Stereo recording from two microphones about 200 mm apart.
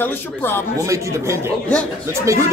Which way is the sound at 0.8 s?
15° right (ahead or behind).